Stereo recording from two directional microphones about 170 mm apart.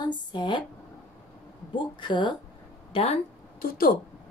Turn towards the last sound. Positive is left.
turn(degrees=60)  # may be behind; listen again after turning